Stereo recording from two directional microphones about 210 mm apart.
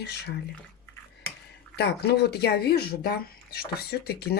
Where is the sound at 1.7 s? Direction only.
50° left (ahead or behind).